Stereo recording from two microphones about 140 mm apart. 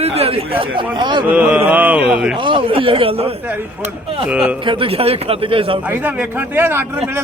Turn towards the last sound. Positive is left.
turn(degrees=-15)  # may be behind; listen again after turning